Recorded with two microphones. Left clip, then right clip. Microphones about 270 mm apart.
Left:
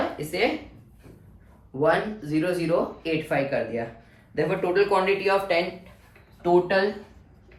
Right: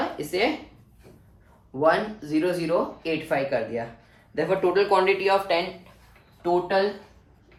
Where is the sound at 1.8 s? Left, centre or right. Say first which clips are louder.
Right 1 dB; right.